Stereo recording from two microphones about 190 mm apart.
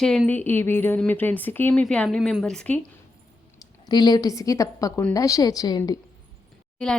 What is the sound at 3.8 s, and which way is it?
A woman's voice, 20° left (ahead or behind).